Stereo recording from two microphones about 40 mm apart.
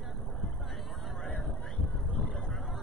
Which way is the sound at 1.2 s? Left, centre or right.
Left.